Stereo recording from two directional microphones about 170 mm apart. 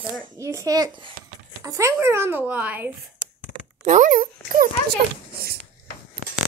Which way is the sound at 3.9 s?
50° right (ahead or behind).